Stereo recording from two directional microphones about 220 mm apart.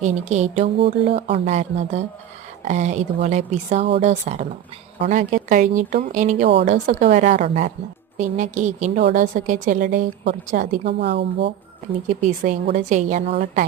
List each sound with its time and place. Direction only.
0.0 s speech: 30° right (ahead or behind); by 11.5 s 50° right (ahead or behind)
12.0 s speech: 35° right (ahead or behind)